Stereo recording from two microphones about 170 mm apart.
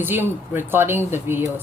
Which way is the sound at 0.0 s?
10° right (ahead or behind).